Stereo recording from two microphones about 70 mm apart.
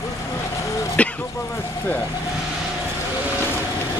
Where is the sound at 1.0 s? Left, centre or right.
Centre.